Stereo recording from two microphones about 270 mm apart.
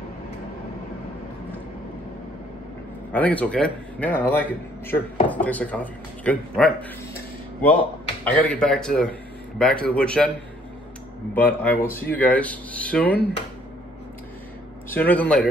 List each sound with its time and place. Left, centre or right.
3.1 s a man's voice: centre
8.2 s a man's voice: centre
11.3 s a man's voice: centre
14.9 s a man's voice: centre